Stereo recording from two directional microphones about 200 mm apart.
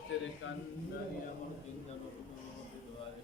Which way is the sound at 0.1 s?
70° left (ahead or behind).